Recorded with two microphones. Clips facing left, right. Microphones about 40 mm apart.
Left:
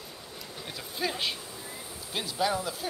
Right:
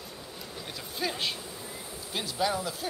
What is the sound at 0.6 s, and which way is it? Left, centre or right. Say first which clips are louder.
Speech: left 1 dB; centre.